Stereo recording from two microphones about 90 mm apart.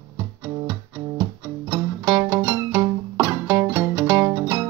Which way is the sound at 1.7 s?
30° right (ahead or behind).